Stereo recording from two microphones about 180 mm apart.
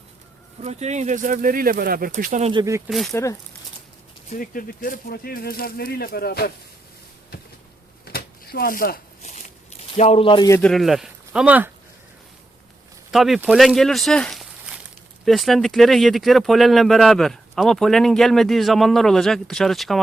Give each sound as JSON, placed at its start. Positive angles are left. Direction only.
{"t": 0.6, "sound": "speech", "side_deg": -40}
{"t": 2.5, "sound": "speech", "side_deg": -20}
{"t": 2.9, "sound": "speech", "side_deg": 0}
{"t": 4.3, "sound": "speech", "side_deg": 50}
{"t": 8.0, "sound": "a sound", "side_deg": 60}
{"t": 10.0, "sound": "speech", "side_deg": 35}
{"t": 10.6, "sound": "speech", "side_deg": 0}
{"t": 13.1, "sound": "speech", "side_deg": 0}